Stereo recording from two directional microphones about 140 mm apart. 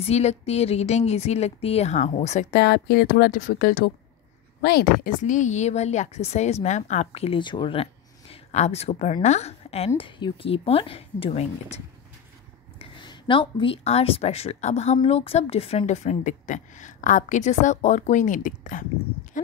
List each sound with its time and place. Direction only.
0.0 s a woman's voice: 50° left (ahead or behind)
3.3 s a woman's voice: 80° left; by 11.8 s 45° left (ahead or behind)
12.7 s a woman's voice: 35° left (ahead or behind); by 19.5 s 65° left (ahead or behind)